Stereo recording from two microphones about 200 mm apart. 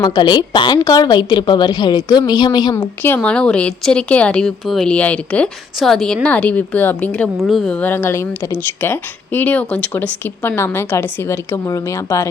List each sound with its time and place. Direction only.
0.0 s a woman's voice: 20° left (ahead or behind)
3.0 s speech: 10° left (ahead or behind)